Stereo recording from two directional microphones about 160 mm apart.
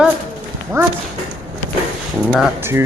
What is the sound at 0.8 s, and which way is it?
Speech, 15° right (ahead or behind).